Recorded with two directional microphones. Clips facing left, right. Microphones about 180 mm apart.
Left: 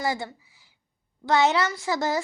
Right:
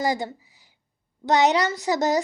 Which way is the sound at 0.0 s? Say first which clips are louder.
Right 3 dB; 20° right (ahead or behind).